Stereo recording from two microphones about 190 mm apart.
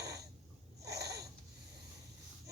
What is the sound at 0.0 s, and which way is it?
Wheeze, 60° right (ahead or behind).